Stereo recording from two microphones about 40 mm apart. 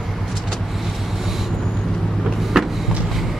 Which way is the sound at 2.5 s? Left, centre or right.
Centre.